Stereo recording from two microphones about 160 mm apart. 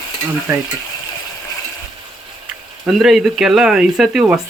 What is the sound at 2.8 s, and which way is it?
Speech, 5° right (ahead or behind).